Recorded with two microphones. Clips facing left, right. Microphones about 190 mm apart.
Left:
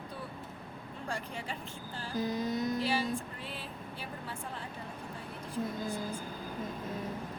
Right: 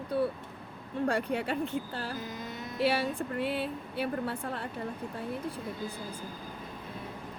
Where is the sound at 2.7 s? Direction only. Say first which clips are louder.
Right 3 dB; 65° right (ahead or behind).